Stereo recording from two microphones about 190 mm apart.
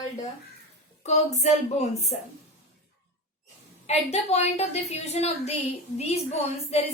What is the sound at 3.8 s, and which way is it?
A woman's voice, 35° left (ahead or behind).